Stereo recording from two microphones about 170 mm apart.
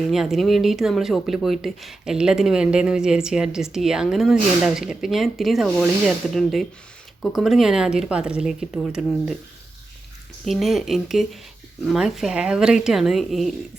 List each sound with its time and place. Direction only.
0.1 s speech: centre (ahead or behind)
10.4 s speech: centre (ahead or behind)